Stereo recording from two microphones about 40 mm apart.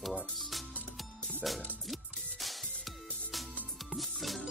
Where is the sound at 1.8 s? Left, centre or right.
Centre.